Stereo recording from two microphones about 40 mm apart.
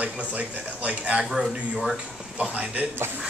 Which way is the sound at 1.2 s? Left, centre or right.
Centre.